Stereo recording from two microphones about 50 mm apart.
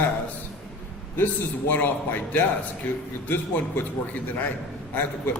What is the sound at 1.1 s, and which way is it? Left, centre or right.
A man's voice, left.